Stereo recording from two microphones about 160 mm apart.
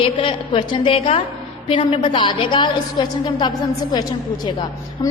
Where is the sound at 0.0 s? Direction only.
35° left (ahead or behind).